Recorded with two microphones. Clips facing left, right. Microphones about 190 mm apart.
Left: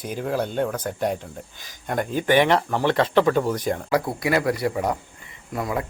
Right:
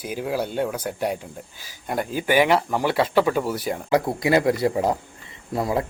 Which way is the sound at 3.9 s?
25° right (ahead or behind).